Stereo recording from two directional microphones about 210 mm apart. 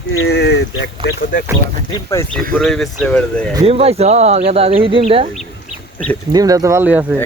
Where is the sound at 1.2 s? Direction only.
40° left (ahead or behind).